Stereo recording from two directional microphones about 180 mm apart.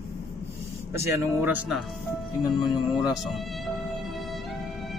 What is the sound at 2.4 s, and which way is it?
Speech, 20° left (ahead or behind).